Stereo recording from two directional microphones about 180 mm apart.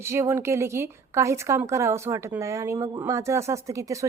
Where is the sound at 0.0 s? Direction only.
15° right (ahead or behind).